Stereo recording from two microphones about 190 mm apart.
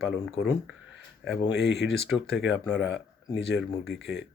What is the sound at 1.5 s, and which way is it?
Speech, 65° left (ahead or behind).